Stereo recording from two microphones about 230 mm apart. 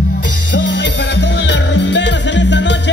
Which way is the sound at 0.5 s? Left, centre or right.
Left.